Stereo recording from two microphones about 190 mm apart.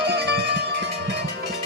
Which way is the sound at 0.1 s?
65° right (ahead or behind).